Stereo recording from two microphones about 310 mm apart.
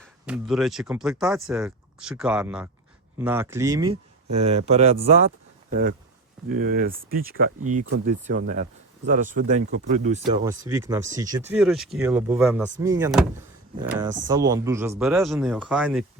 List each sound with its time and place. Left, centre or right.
0.3 s speech: centre